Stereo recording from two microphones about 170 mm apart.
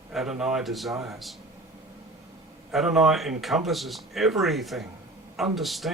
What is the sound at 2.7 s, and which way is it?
Speech, centre (ahead or behind).